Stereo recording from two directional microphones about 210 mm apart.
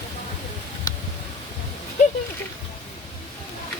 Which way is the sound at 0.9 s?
20° left (ahead or behind).